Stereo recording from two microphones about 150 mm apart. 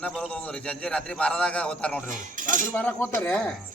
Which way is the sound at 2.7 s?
15° left (ahead or behind).